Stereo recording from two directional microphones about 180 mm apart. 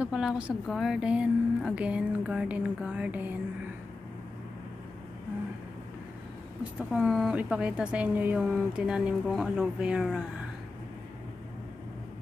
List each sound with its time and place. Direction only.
0.0 s a woman's voice: 5° right (ahead or behind)
6.9 s speech: 5° right (ahead or behind)